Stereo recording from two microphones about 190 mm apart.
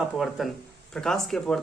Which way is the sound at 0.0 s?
Centre (ahead or behind).